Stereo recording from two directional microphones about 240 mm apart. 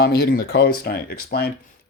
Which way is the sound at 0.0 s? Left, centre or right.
Left.